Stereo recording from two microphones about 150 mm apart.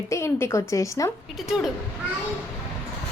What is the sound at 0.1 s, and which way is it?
A woman's voice, 20° left (ahead or behind).